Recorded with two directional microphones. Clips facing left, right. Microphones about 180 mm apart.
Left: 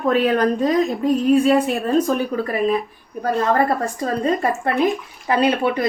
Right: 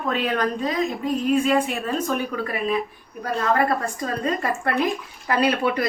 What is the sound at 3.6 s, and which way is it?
A woman's voice, 30° left (ahead or behind).